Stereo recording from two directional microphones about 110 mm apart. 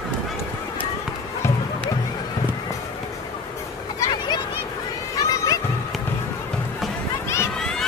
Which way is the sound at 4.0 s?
35° left (ahead or behind).